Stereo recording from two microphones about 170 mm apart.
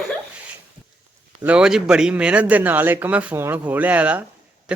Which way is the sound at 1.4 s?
5° right (ahead or behind).